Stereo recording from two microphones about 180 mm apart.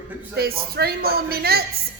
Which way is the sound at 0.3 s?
60° right (ahead or behind).